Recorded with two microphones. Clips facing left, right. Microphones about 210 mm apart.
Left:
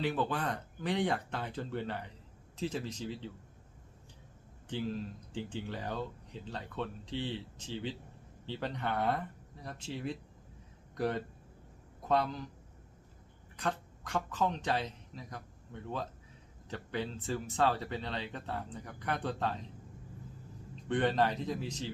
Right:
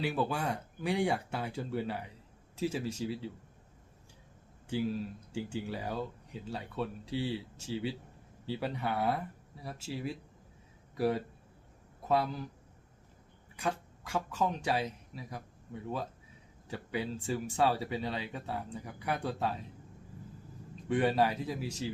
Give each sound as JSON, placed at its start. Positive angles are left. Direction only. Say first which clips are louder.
{"t": 0.0, "sound": "speech", "louder": "right 1 dB", "side_deg": -10}
{"t": 4.7, "sound": "speech", "louder": "right 3 dB", "side_deg": -10}
{"t": 13.6, "sound": "speech", "louder": "right 1 dB", "side_deg": -10}
{"t": 20.8, "sound": "speech", "louder": "right 1 dB", "side_deg": -10}